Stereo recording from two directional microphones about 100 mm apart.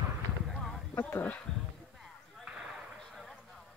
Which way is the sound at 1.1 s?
15° left (ahead or behind).